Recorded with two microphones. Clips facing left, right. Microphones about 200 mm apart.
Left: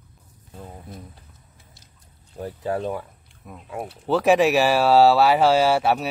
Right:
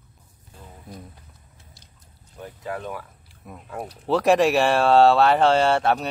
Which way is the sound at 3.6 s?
10° left (ahead or behind).